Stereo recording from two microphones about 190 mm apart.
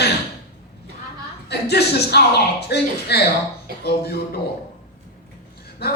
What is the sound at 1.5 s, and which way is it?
Speech, 60° left (ahead or behind).